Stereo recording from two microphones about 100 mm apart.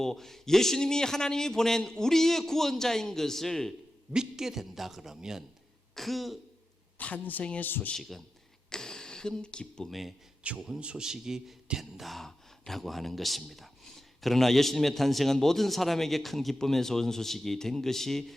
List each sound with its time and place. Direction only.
0.0 s a man's voice: 5° left (ahead or behind)
7.0 s speech: 15° left (ahead or behind)
8.7 s a man's voice: 5° left (ahead or behind)